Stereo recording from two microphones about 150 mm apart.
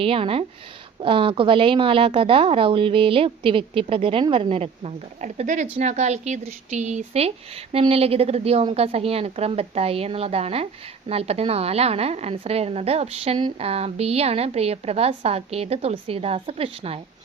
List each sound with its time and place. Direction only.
0.0 s a woman's voice: 40° right (ahead or behind)